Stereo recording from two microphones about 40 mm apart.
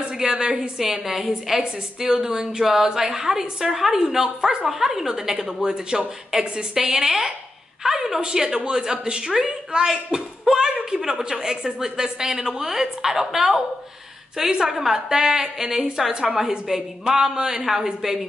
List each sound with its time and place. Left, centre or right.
0.2 s a woman's voice: centre
1.6 s a woman's voice: centre
9.3 s a woman's voice: centre